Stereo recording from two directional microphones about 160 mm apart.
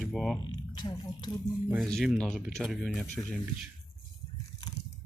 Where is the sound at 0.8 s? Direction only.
25° left (ahead or behind).